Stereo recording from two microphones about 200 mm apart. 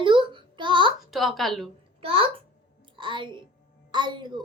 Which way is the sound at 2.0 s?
30° right (ahead or behind).